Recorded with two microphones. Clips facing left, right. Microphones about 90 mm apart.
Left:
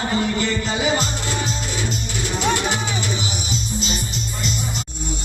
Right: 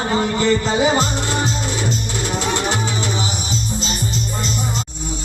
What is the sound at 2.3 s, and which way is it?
Music, 40° right (ahead or behind).